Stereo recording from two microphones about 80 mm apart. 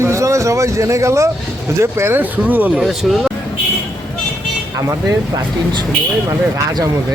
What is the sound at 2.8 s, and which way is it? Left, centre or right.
Speech, centre.